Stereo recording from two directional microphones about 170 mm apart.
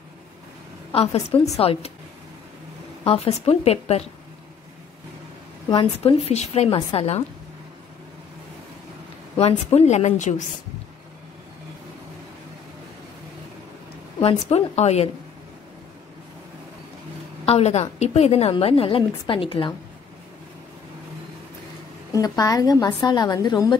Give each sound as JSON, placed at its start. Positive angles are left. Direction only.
{"t": 0.9, "sound": "a woman's voice", "side_deg": 35}
{"t": 3.0, "sound": "a woman's voice", "side_deg": 35}
{"t": 5.7, "sound": "a woman's voice", "side_deg": 35}
{"t": 9.4, "sound": "a woman's voice", "side_deg": 35}
{"t": 14.2, "sound": "a woman's voice", "side_deg": 40}
{"t": 17.5, "sound": "a woman's voice", "side_deg": 40}
{"t": 22.1, "sound": "a woman's voice", "side_deg": 20}